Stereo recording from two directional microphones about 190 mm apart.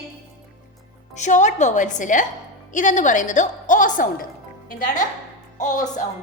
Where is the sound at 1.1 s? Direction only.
40° left (ahead or behind).